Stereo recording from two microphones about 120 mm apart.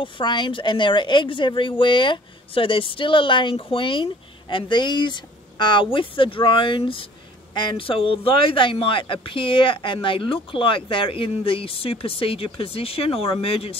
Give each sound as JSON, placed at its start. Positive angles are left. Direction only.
{"t": 0.0, "sound": "speech", "side_deg": 40}